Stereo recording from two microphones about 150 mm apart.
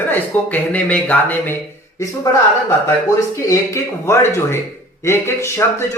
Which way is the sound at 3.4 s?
20° left (ahead or behind).